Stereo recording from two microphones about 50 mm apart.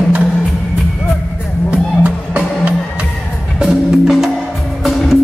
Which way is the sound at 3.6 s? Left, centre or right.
Centre.